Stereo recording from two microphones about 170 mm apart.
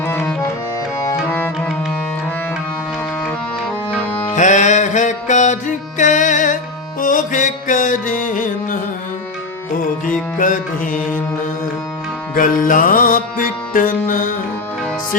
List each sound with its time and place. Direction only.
0.0 s music: 10° left (ahead or behind)
3.2 s music: 5° left (ahead or behind)
4.4 s music: 45° left (ahead or behind)
10.1 s music: 50° left (ahead or behind)
12.3 s music: 55° left (ahead or behind)